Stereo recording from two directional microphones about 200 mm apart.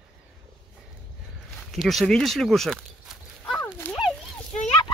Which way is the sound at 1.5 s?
Centre (ahead or behind).